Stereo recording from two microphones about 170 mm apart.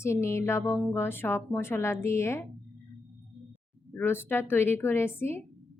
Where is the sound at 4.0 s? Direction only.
10° left (ahead or behind).